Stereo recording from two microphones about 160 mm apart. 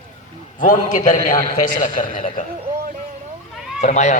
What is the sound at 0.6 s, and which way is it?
A man's voice, 55° left (ahead or behind).